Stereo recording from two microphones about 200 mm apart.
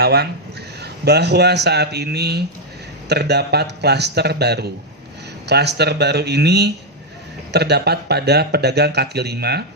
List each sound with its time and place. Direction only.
0.0 s speech: 50° right (ahead or behind)